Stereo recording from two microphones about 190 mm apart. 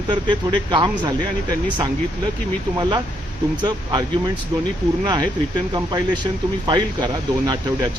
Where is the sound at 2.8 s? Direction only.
25° right (ahead or behind).